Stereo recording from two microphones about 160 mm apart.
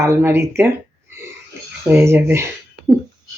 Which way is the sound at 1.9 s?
15° right (ahead or behind).